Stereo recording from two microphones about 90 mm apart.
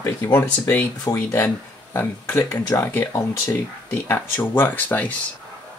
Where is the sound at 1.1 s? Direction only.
45° left (ahead or behind).